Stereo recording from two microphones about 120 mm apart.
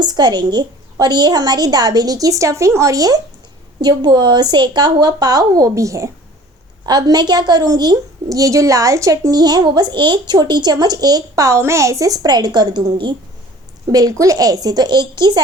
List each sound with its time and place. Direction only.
0.0 s a woman's voice: 35° right (ahead or behind)
13.9 s a woman's voice: 30° right (ahead or behind)